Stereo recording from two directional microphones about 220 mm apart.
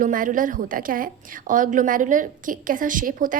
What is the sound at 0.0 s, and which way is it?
A woman's voice, 35° right (ahead or behind).